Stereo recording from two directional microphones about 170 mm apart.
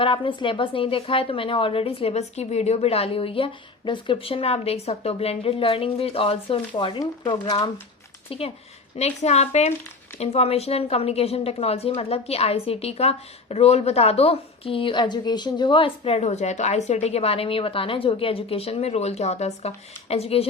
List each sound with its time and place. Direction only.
0.0 s a woman's voice: 30° left (ahead or behind)